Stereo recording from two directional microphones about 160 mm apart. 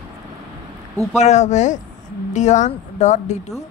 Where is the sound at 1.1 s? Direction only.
45° left (ahead or behind).